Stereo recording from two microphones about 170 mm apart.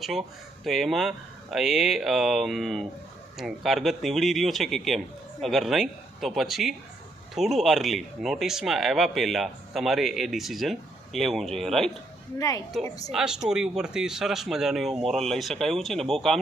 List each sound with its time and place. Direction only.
0.0 s speech: centre (ahead or behind)
12.4 s a woman's voice: 20° left (ahead or behind)
13.1 s speech: 5° right (ahead or behind)